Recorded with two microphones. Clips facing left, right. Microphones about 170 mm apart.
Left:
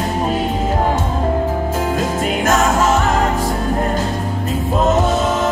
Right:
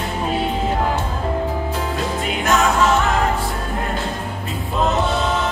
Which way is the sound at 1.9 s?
45° left (ahead or behind).